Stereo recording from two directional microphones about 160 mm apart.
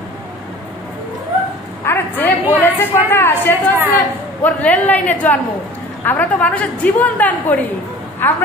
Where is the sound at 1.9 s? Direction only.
15° left (ahead or behind).